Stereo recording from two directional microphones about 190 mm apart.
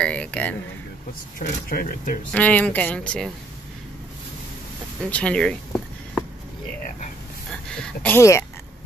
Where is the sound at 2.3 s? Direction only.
5° left (ahead or behind).